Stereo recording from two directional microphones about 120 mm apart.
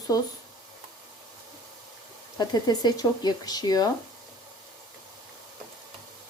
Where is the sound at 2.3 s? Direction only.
35° left (ahead or behind).